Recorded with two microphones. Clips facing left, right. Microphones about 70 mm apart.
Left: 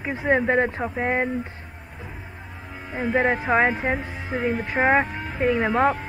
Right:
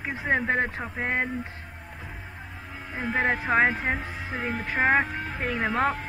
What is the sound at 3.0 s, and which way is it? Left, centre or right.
Speech, centre.